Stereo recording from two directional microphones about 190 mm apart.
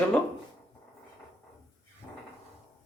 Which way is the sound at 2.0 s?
15° left (ahead or behind).